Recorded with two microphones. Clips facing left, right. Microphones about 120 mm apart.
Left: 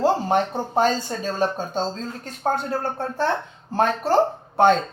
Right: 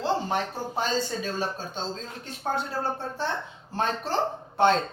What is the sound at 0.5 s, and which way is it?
Speech, 50° left (ahead or behind).